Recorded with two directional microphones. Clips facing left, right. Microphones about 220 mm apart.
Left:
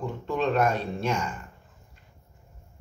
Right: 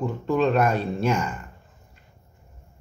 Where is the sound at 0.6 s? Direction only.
5° right (ahead or behind).